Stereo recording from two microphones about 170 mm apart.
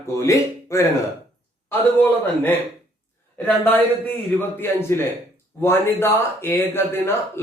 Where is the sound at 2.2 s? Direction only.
10° left (ahead or behind).